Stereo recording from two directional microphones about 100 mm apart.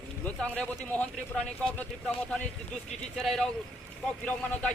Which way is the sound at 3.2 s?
5° left (ahead or behind).